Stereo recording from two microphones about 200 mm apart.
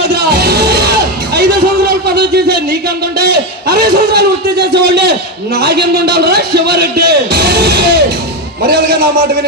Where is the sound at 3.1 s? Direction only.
55° right (ahead or behind).